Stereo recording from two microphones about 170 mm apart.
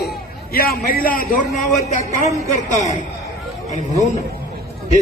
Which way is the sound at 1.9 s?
40° left (ahead or behind).